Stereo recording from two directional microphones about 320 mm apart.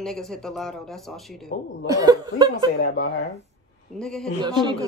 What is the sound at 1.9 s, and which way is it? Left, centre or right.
Speech, centre.